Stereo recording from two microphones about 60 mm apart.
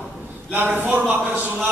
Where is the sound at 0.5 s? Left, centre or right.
Right.